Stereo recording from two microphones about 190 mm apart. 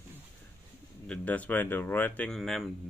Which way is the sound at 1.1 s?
5° left (ahead or behind).